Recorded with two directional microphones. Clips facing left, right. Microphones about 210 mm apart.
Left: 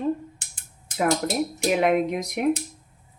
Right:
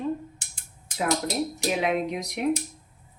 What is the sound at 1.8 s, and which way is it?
Speech, 55° left (ahead or behind).